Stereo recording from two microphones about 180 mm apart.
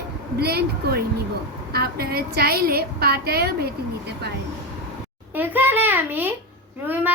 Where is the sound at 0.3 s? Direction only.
60° right (ahead or behind).